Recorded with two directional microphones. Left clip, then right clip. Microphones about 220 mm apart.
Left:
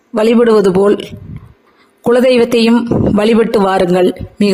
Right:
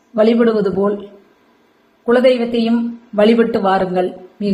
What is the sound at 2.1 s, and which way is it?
A woman's voice, 50° left (ahead or behind).